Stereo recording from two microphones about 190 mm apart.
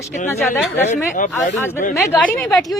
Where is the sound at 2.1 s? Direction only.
10° left (ahead or behind).